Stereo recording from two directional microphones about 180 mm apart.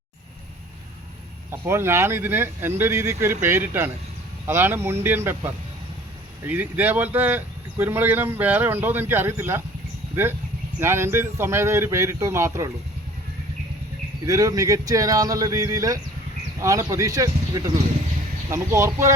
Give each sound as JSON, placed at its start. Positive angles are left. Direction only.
{"t": 1.5, "sound": "speech", "side_deg": -15}
{"t": 10.8, "sound": "speech", "side_deg": -15}
{"t": 14.3, "sound": "speech", "side_deg": -20}